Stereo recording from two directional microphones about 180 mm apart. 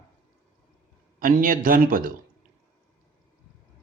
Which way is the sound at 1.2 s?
50° right (ahead or behind).